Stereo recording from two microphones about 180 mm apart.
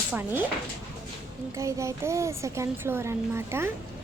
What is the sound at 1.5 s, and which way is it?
Speech, 15° right (ahead or behind).